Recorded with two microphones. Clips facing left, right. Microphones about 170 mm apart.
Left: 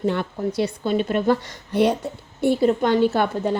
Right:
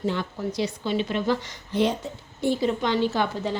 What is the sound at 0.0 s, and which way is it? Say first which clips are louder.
A woman's voice: left 4 dB; 55° left (ahead or behind).